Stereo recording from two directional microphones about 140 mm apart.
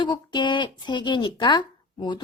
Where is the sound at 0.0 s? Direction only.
35° left (ahead or behind).